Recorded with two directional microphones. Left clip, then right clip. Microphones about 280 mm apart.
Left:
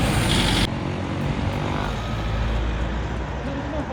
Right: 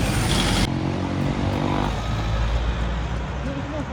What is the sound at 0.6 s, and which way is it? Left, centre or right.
Vehicle, right.